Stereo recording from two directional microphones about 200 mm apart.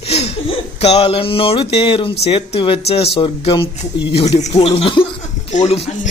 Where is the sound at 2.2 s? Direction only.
30° left (ahead or behind).